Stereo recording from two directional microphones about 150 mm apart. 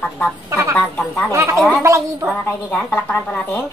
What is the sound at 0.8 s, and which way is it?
Speech, 10° left (ahead or behind).